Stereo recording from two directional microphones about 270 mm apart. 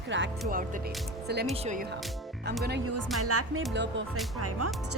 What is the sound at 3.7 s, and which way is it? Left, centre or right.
Speech, right.